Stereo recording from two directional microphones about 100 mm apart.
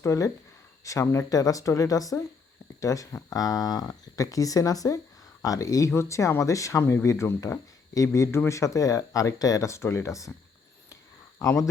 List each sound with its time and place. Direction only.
0.0 s speech: 30° left (ahead or behind)
11.3 s speech: 30° left (ahead or behind)